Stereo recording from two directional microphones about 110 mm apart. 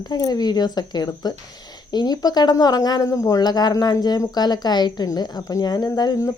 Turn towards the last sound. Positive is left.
turn(degrees=35)  # may be behind; listen again after turning